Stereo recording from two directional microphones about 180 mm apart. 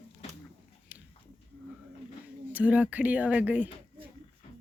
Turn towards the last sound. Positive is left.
turn(degrees=-10)  # may be behind; listen again after turning